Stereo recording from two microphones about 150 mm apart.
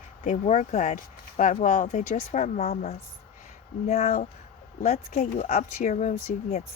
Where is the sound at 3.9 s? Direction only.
45° left (ahead or behind).